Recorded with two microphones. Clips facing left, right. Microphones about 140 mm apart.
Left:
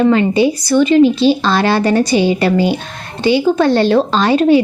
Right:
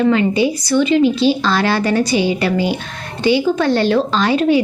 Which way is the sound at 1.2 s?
30° left (ahead or behind).